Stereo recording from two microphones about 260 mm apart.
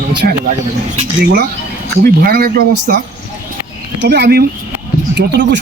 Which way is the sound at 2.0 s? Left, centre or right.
Right.